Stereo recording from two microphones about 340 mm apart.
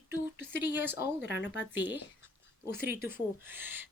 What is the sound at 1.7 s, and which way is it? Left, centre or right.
Speech, centre.